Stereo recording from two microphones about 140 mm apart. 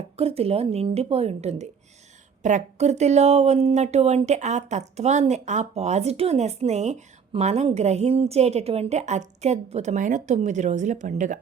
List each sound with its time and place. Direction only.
0.2 s speech: 45° right (ahead or behind); by 11.3 s 65° right (ahead or behind)